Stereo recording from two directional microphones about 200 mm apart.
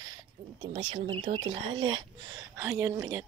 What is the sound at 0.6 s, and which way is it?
Speech, 25° right (ahead or behind).